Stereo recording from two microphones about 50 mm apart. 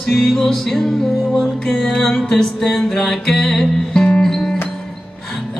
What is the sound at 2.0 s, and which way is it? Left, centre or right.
Music, centre.